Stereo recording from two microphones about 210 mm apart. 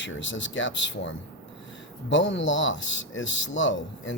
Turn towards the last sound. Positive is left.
turn(degrees=60)  # may be behind; listen again after turning